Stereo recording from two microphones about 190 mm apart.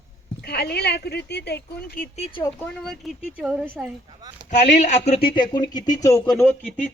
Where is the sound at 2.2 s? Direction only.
30° left (ahead or behind).